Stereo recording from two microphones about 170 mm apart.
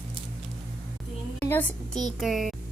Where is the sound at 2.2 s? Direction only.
Centre (ahead or behind).